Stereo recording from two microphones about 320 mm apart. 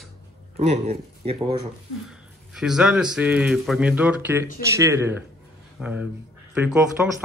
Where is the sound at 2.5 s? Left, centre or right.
Centre.